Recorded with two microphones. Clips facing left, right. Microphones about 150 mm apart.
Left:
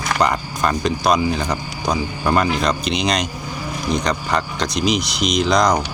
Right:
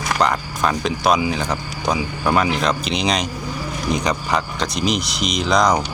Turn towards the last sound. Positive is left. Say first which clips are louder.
# left 1 dB
turn(degrees=-5)  # may be behind; listen again after turning